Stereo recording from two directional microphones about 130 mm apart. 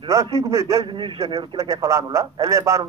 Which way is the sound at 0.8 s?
40° right (ahead or behind).